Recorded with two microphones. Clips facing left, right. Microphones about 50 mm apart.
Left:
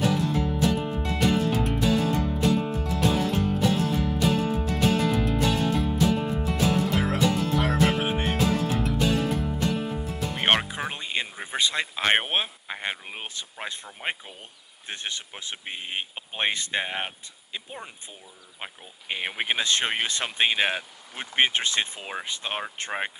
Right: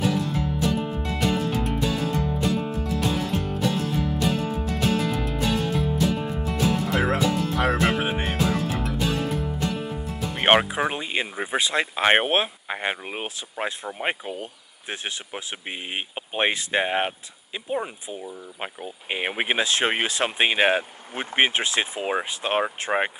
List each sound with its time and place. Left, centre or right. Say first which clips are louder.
0.0 s music: even; centre
10.4 s speech: right 5 dB; centre